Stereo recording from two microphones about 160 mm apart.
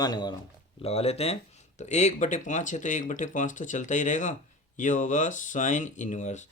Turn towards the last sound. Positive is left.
turn(degrees=50)  # may be behind; listen again after turning